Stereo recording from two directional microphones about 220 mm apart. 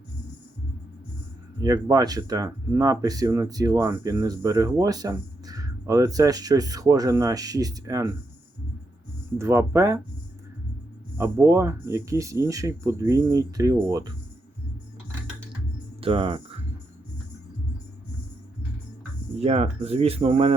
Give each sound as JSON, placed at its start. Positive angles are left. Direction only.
{"t": 1.6, "sound": "speech", "side_deg": -15}
{"t": 9.4, "sound": "speech", "side_deg": -10}
{"t": 11.2, "sound": "speech", "side_deg": -15}
{"t": 16.0, "sound": "speech", "side_deg": -25}
{"t": 19.4, "sound": "speech", "side_deg": -30}